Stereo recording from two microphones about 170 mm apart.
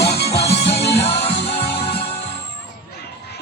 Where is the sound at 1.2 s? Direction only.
35° left (ahead or behind).